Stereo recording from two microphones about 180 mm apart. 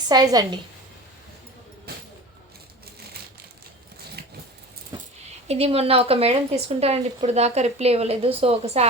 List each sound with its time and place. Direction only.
0.1 s a woman's voice: 20° right (ahead or behind)
5.5 s speech: 35° right (ahead or behind)